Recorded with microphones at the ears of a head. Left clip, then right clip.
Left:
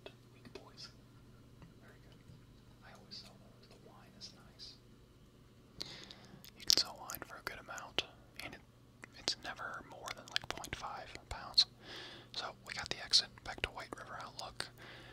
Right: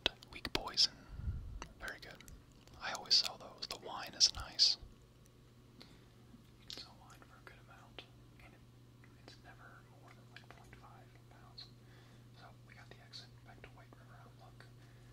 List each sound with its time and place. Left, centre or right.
0.0 s whispering: right
5.8 s a sound: left
6.6 s whispering: left